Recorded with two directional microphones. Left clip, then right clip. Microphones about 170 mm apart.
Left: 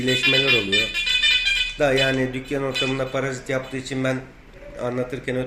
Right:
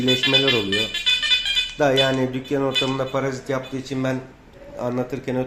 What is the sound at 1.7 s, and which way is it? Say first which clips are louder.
Speech: right 4 dB; 55° right (ahead or behind).